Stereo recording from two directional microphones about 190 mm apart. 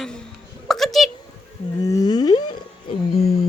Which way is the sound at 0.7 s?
Centre (ahead or behind).